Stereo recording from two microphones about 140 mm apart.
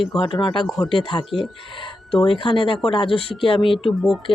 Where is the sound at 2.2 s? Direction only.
35° left (ahead or behind).